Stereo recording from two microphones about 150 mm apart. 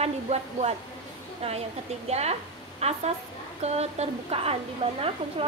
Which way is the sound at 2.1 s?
45° right (ahead or behind).